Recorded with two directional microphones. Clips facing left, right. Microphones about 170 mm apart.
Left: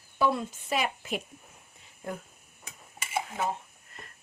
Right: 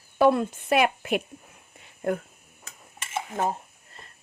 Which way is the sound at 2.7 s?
15° left (ahead or behind).